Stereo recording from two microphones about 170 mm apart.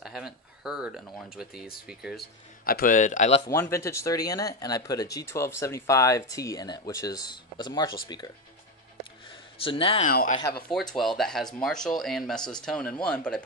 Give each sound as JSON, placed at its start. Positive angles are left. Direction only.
{"t": 0.0, "sound": "speech", "side_deg": -5}
{"t": 2.6, "sound": "a man's voice", "side_deg": 60}
{"t": 3.7, "sound": "speech", "side_deg": 15}
{"t": 9.6, "sound": "speech", "side_deg": 30}
{"t": 10.0, "sound": "a man's voice", "side_deg": 50}
{"t": 10.7, "sound": "speech", "side_deg": 0}